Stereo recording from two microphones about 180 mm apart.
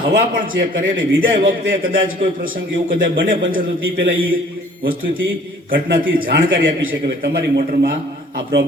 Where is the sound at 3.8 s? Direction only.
90° right.